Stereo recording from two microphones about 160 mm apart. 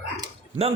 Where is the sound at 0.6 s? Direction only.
40° right (ahead or behind).